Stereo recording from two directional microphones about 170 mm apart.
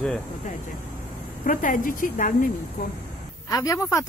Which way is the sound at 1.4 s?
50° left (ahead or behind).